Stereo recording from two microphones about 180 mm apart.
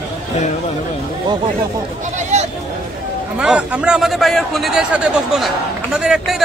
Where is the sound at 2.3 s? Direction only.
40° right (ahead or behind).